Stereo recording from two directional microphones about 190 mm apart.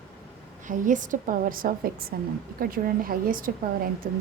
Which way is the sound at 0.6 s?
40° right (ahead or behind).